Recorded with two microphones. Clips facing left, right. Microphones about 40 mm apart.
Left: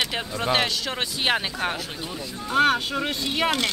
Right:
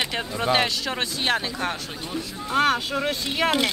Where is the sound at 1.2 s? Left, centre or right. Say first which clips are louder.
Left 1 dB; centre.